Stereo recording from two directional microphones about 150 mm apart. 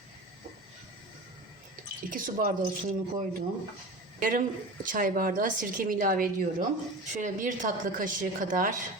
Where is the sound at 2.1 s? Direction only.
65° right (ahead or behind).